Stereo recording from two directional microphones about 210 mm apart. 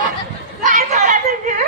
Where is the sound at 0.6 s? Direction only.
35° right (ahead or behind).